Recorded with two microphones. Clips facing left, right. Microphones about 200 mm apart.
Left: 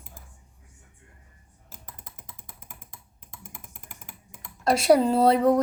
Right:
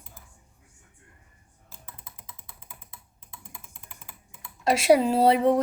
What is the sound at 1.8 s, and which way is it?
Computer keyboard, 45° left (ahead or behind).